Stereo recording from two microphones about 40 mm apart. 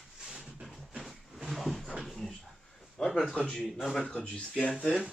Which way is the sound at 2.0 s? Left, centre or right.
Centre.